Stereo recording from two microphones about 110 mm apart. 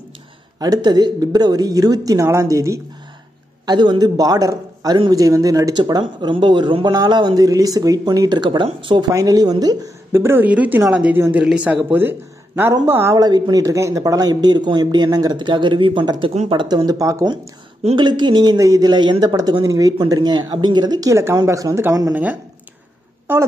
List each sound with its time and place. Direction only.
0.6 s speech: 35° right (ahead or behind)
3.6 s speech: 45° right (ahead or behind)
9.1 s speech: 35° right (ahead or behind)
10.1 s speech: 20° right (ahead or behind)
11.1 s speech: 20° right (ahead or behind)
11.4 s speech: 10° right (ahead or behind)
13.1 s speech: 35° right (ahead or behind)
22.1 s speech: 15° right (ahead or behind)